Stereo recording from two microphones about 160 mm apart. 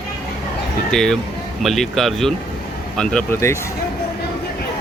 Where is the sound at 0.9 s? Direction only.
5° left (ahead or behind).